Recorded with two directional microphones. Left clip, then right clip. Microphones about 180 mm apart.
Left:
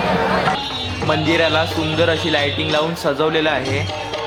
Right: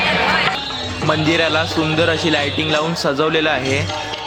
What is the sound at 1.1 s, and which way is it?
A man's voice, 25° right (ahead or behind).